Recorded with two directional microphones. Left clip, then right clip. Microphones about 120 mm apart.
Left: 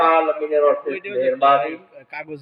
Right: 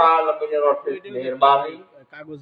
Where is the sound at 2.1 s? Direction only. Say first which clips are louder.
Left 6 dB; 10° left (ahead or behind).